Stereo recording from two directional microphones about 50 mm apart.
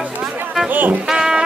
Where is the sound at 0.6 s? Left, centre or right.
Right.